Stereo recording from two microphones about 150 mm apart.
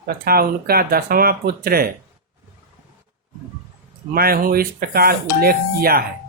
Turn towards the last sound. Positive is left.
turn(degrees=-90)